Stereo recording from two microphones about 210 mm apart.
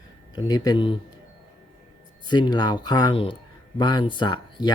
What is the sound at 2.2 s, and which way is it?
Speech, 20° left (ahead or behind).